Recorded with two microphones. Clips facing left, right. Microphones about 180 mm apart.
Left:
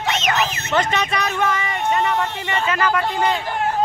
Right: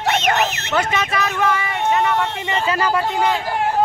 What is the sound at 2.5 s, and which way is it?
Speech, 35° right (ahead or behind).